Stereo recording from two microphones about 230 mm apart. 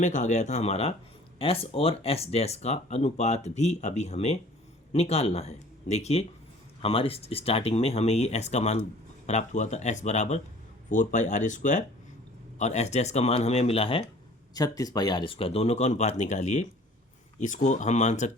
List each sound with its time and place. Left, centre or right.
0.0 s speech: left